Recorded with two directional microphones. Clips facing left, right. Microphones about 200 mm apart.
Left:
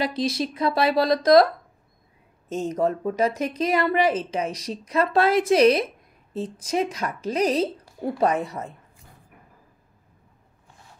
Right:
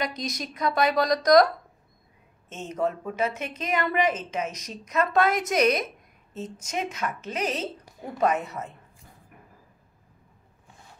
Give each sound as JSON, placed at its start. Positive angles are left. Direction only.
{"t": 0.0, "sound": "speech", "side_deg": 30}
{"t": 2.5, "sound": "a woman's voice", "side_deg": 35}